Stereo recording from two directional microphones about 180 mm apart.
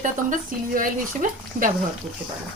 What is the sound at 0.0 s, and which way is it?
A woman's voice, 45° right (ahead or behind).